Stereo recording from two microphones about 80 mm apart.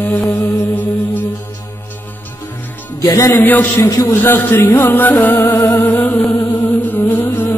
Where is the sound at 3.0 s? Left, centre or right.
Left.